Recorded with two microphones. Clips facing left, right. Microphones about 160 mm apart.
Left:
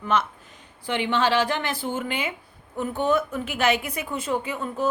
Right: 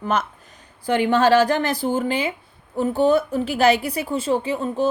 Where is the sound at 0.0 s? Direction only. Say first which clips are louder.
Right 1 dB; 40° right (ahead or behind).